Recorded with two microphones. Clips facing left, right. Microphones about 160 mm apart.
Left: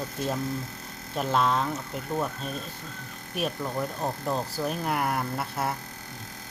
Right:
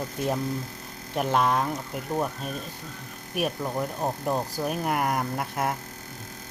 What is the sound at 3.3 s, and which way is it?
Speech, 15° right (ahead or behind).